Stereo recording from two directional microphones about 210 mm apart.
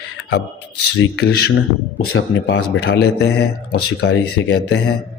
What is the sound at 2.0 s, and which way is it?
Speech, 75° left (ahead or behind).